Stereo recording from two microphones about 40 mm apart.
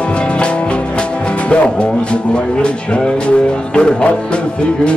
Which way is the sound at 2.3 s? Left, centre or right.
Left.